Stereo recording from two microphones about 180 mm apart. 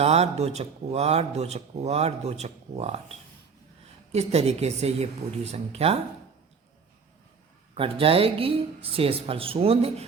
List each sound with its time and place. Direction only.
0.0 s speech: 35° right (ahead or behind)
7.8 s speech: 30° right (ahead or behind)